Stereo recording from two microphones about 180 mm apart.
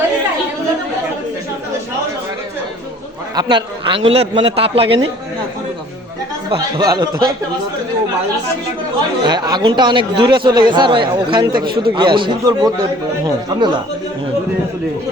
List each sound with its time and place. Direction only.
3.3 s a man's voice: 25° right (ahead or behind)
6.5 s a man's voice: 20° right (ahead or behind)
9.2 s a man's voice: 25° right (ahead or behind)
11.6 s a man's voice: 60° right (ahead or behind)
11.9 s a man's voice: 25° right (ahead or behind)